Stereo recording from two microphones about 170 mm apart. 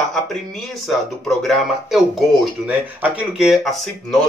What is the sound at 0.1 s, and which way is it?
Speech, centre (ahead or behind).